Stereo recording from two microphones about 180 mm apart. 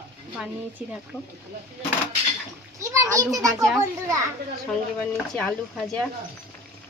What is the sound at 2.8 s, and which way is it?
Speech, 15° right (ahead or behind).